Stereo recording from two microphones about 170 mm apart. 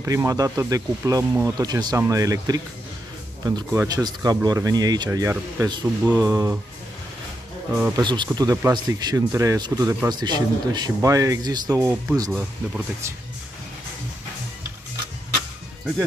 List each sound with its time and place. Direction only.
0.0 s speech: 20° right (ahead or behind)
7.7 s speech: 20° right (ahead or behind)
12.3 s speech: 10° right (ahead or behind)